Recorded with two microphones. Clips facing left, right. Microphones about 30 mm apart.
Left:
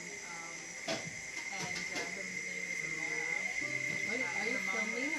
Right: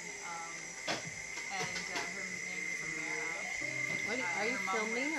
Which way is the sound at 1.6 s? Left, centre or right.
Centre.